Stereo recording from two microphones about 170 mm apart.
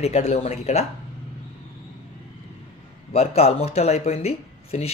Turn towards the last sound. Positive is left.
turn(degrees=35)  # may be behind; listen again after turning